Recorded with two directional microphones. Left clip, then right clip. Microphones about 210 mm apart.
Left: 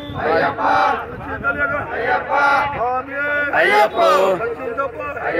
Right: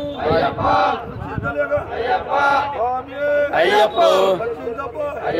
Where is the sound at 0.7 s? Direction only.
25° right (ahead or behind).